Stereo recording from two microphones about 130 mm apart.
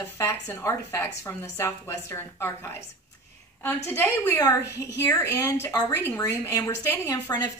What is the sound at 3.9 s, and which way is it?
Speech, 15° left (ahead or behind).